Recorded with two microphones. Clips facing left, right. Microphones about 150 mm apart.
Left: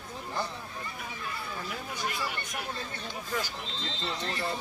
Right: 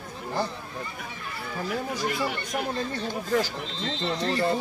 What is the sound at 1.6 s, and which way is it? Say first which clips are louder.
Chatter: right 8 dB; 50° right (ahead or behind).